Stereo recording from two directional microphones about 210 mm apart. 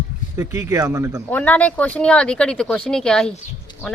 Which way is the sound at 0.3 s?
15° right (ahead or behind).